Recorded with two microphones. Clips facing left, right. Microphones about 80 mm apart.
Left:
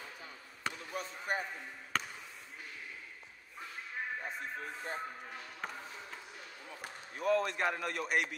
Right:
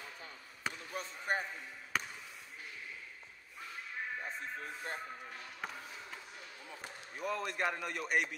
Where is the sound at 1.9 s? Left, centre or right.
Centre.